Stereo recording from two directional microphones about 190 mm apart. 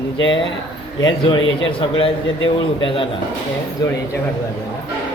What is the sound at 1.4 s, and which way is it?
Speech, 90° left.